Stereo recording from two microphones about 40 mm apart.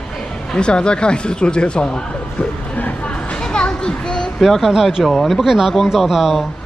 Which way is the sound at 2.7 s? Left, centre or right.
Left.